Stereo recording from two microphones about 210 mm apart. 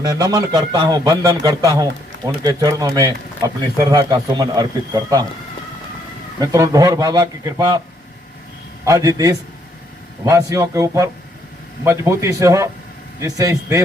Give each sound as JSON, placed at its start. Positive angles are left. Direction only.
{"t": 0.0, "sound": "a man's voice", "side_deg": -20}
{"t": 6.4, "sound": "a man's voice", "side_deg": -15}
{"t": 8.8, "sound": "a man's voice", "side_deg": -15}